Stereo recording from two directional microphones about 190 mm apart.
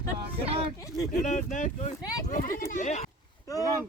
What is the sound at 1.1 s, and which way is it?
Speech, 40° left (ahead or behind).